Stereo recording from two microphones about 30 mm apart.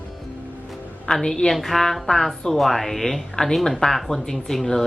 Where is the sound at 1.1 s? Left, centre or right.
Centre.